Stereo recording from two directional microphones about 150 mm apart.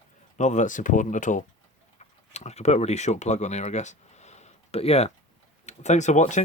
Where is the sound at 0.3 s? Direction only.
55° left (ahead or behind).